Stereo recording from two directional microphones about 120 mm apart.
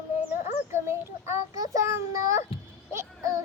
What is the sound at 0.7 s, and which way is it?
A child's voice, 20° right (ahead or behind).